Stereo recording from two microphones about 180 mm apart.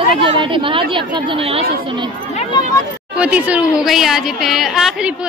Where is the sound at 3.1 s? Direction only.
5° right (ahead or behind).